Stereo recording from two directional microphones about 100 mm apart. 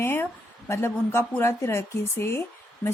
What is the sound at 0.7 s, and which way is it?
A woman's voice, 25° left (ahead or behind).